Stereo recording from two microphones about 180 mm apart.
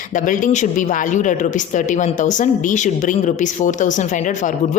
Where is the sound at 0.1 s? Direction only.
45° left (ahead or behind).